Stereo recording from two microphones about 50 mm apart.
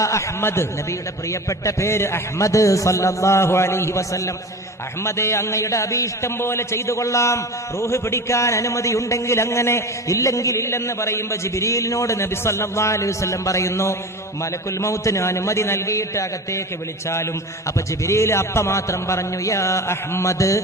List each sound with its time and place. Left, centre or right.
0.4 s a man's voice: left
1.3 s a man's voice: left
5.0 s a man's voice: left
6.4 s a man's voice: left
14.8 s a man's voice: left
18.0 s a man's voice: left